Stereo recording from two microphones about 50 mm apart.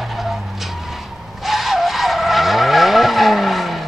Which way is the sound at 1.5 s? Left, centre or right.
Centre.